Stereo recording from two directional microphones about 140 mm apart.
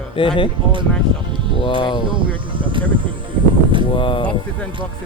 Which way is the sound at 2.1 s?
35° right (ahead or behind).